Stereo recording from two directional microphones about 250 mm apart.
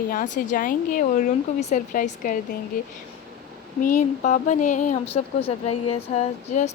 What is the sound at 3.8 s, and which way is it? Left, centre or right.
Speech, left.